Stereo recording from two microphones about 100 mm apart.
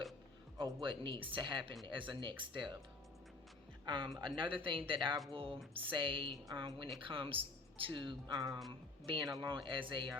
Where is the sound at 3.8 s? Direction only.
55° right (ahead or behind).